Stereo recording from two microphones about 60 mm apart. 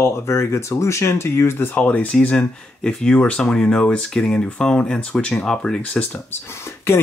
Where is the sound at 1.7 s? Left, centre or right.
Left.